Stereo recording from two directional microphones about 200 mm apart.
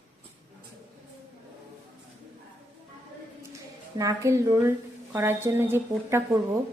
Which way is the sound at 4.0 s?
15° right (ahead or behind).